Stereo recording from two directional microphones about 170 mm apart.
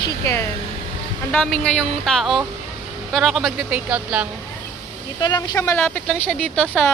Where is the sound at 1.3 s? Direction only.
5° left (ahead or behind).